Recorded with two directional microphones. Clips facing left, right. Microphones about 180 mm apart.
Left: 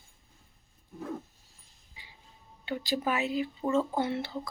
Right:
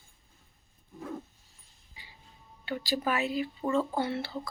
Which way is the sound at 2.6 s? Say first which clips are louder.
Even; 20° left (ahead or behind).